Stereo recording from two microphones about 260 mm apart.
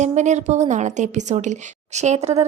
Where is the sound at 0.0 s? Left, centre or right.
Right.